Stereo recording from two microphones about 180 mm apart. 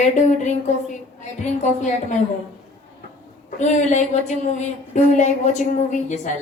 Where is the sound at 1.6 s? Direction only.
45° left (ahead or behind).